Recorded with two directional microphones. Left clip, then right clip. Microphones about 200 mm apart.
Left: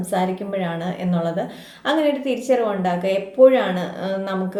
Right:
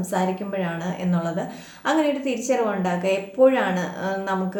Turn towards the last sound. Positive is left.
turn(degrees=5)  # may be behind; listen again after turning